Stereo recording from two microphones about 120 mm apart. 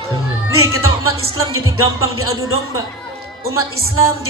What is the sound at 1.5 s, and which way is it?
A man's voice, 25° right (ahead or behind).